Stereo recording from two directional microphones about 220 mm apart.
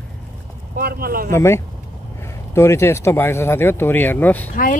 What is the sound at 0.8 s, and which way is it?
Speech, 45° right (ahead or behind).